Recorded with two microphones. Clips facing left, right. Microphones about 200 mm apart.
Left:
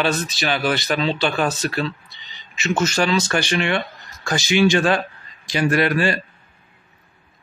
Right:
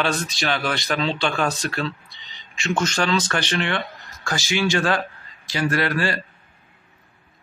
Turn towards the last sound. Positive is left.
turn(degrees=20)  # may be behind; listen again after turning